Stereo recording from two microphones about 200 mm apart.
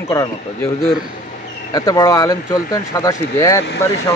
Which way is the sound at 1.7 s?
20° left (ahead or behind).